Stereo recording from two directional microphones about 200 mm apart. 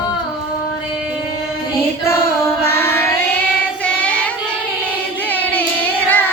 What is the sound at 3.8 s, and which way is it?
Child singing, 5° left (ahead or behind).